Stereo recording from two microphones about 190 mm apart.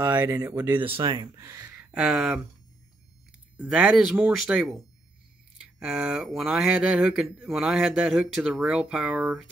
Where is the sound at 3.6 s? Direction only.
5° right (ahead or behind).